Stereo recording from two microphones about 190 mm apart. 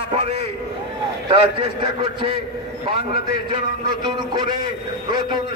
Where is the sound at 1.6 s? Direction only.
25° right (ahead or behind).